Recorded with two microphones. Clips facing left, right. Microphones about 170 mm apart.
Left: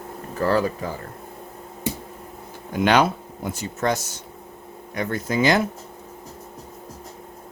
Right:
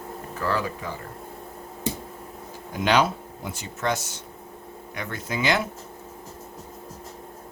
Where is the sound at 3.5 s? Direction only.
40° left (ahead or behind).